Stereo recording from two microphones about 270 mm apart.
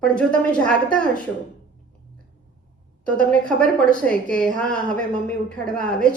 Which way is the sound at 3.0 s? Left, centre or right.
Centre.